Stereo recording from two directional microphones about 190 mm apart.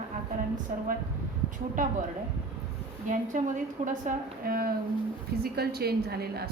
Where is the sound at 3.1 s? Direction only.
40° right (ahead or behind).